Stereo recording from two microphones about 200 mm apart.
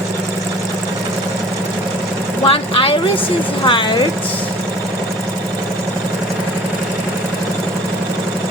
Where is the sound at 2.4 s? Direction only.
25° left (ahead or behind).